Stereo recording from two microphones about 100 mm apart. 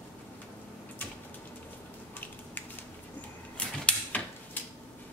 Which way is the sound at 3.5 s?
10° left (ahead or behind).